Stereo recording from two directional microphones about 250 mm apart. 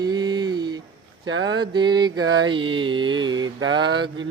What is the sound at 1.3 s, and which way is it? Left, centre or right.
Speech, right.